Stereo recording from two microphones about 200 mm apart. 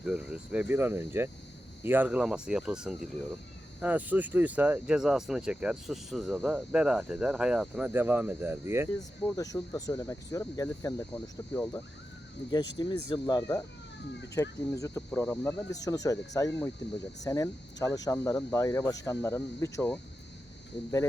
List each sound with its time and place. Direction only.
0.0 s speech: 5° right (ahead or behind)
9.3 s speech: 15° left (ahead or behind)
12.5 s speech: 20° left (ahead or behind)